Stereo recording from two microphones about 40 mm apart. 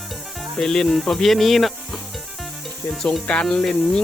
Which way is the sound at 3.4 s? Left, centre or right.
Centre.